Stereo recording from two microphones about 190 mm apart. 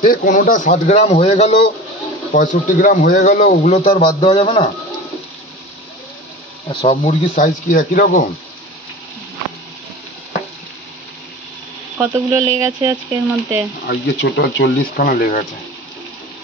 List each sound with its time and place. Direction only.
0.0 s a man's voice: 50° left (ahead or behind)
4.0 s a man's voice: 25° left (ahead or behind)
6.7 s a man's voice: 25° left (ahead or behind)
7.0 s a man's voice: 35° left (ahead or behind)
12.0 s speech: 15° right (ahead or behind)
13.8 s speech: 65° left (ahead or behind); by 15.4 s 45° left (ahead or behind)